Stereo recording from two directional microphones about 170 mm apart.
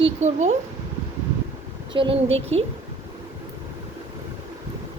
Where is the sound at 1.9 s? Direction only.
30° right (ahead or behind).